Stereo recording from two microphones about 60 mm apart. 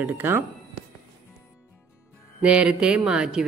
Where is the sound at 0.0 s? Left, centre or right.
Right.